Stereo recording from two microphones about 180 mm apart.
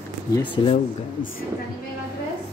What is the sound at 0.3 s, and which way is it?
Speech, 25° left (ahead or behind).